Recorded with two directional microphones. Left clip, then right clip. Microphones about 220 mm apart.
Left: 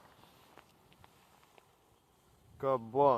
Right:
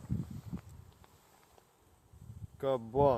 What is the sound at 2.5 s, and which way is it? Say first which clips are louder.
Speech: even; 15° right (ahead or behind).